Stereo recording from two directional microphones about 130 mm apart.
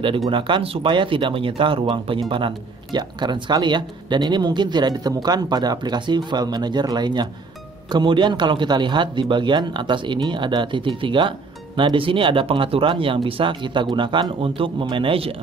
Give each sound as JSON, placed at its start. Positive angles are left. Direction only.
{"t": 0.3, "sound": "a man's voice", "side_deg": -40}